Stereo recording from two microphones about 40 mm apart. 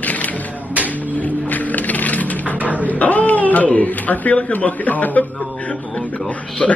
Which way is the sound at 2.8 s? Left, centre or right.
Left.